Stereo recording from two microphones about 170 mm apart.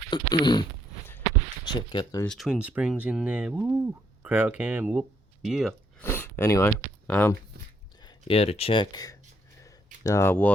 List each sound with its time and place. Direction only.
0.1 s dog: 25° left (ahead or behind)
1.6 s speech: 25° left (ahead or behind)
2.2 s speech: centre (ahead or behind)
6.0 s speech: 10° left (ahead or behind)
8.0 s speech: 35° left (ahead or behind)
9.6 s a sound: 20° left (ahead or behind)